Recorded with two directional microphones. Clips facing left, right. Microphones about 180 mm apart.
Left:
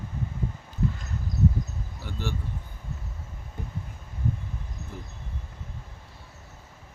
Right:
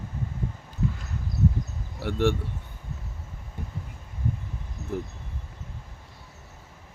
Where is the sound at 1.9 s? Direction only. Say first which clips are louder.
Right 11 dB; 75° right (ahead or behind).